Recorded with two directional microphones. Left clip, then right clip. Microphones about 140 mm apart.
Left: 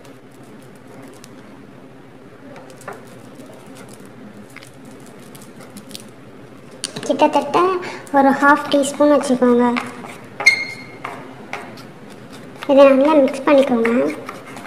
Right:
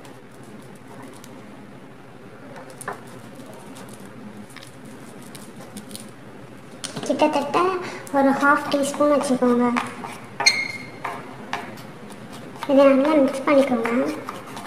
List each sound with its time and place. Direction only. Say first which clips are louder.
7.0 s a woman's voice: left 5 dB; 35° left (ahead or behind)
12.5 s a child's voice: left 5 dB; 40° left (ahead or behind)
13.8 s speech: left 5 dB; 10° left (ahead or behind)